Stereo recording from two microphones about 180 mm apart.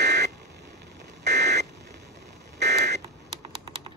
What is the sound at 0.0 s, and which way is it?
Buzzer, 70° right (ahead or behind).